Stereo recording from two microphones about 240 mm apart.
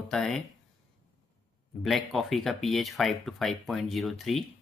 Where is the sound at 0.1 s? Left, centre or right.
Centre.